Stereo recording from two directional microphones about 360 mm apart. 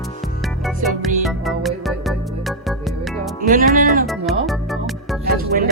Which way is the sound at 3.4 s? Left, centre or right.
Right.